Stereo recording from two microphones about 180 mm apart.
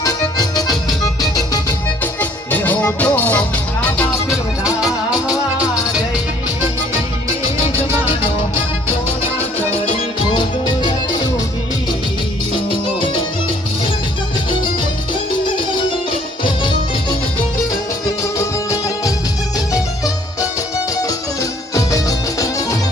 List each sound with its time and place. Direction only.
0.0 s music: 20° left (ahead or behind)
2.5 s music: 10° left (ahead or behind)
4.3 s music: 5° right (ahead or behind)
10.3 s music: 25° left (ahead or behind)
12.5 s music: 25° left (ahead or behind)
18.0 s music: 15° left (ahead or behind)
21.8 s music: 20° left (ahead or behind)